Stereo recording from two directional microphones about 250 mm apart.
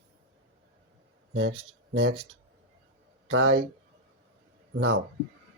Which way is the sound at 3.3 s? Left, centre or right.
Right.